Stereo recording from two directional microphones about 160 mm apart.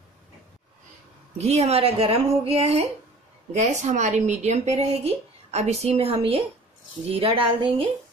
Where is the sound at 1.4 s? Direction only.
40° right (ahead or behind).